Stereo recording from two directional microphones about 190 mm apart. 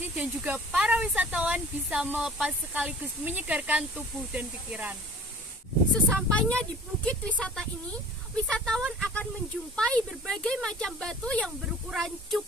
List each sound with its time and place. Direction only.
0.2 s speech: 5° right (ahead or behind)
5.9 s speech: 5° left (ahead or behind)